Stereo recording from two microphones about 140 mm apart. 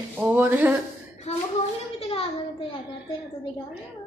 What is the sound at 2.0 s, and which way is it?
Speech, 45° left (ahead or behind).